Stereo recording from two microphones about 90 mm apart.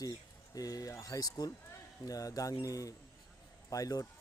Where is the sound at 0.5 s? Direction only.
45° left (ahead or behind).